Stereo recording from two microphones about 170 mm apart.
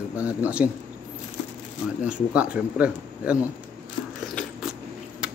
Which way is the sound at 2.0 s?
5° right (ahead or behind).